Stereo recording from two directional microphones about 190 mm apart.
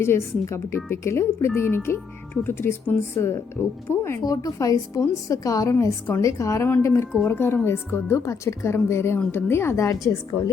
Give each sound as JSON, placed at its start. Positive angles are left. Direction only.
{"t": 0.0, "sound": "a woman's voice", "side_deg": 15}